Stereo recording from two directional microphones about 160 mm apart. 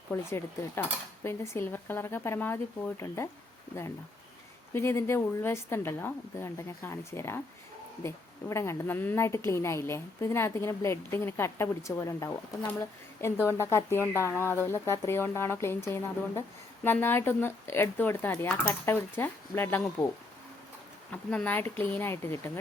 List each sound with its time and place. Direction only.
0.1 s a woman's voice: 15° left (ahead or behind)
4.7 s a woman's voice: 15° left (ahead or behind)
21.1 s a woman's voice: 10° left (ahead or behind)